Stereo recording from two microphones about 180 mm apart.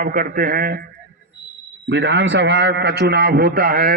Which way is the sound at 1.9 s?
80° right.